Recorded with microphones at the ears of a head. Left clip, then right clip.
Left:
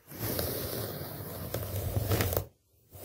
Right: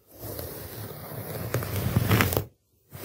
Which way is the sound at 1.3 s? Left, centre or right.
Right.